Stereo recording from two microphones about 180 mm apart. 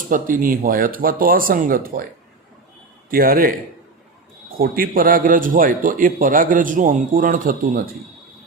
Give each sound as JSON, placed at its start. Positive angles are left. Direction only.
{"t": 0.1, "sound": "a man's voice", "side_deg": -50}
{"t": 3.1, "sound": "a man's voice", "side_deg": -55}
{"t": 4.5, "sound": "a man's voice", "side_deg": -55}